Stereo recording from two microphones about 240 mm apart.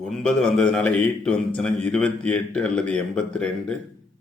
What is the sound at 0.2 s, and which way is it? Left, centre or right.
Speech, centre.